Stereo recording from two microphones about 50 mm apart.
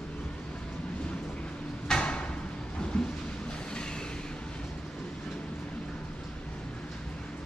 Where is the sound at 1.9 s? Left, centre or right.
Centre.